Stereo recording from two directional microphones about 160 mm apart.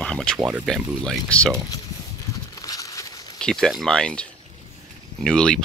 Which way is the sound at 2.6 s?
20° left (ahead or behind).